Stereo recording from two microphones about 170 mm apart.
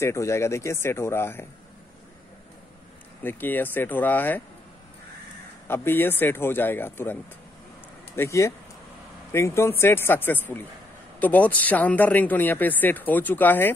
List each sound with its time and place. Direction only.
0.0 s speech: 15° left (ahead or behind)
3.3 s speech: 10° left (ahead or behind)
5.7 s speech: 10° left (ahead or behind)
8.2 s speech: 15° left (ahead or behind)